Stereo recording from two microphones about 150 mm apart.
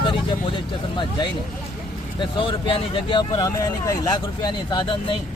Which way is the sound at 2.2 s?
35° left (ahead or behind).